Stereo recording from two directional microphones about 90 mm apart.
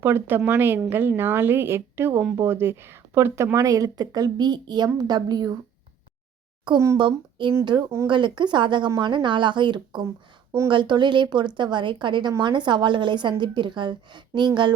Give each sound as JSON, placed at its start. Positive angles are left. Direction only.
{"t": 0.0, "sound": "a woman's voice", "side_deg": -25}
{"t": 6.9, "sound": "speech", "side_deg": -60}